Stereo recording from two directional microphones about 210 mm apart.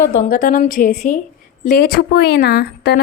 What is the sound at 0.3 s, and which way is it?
A woman's voice, 40° left (ahead or behind).